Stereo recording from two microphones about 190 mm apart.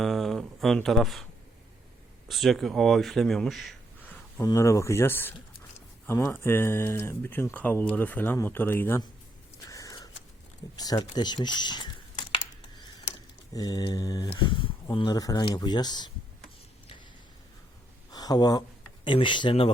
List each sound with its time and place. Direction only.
0.0 s speech: centre (ahead or behind)
9.6 s a sound: 15° left (ahead or behind)
10.8 s speech: 20° left (ahead or behind)
13.5 s speech: 20° left (ahead or behind)
18.1 s speech: 20° left (ahead or behind)